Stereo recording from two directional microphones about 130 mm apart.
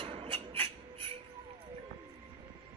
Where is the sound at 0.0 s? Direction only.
45° right (ahead or behind).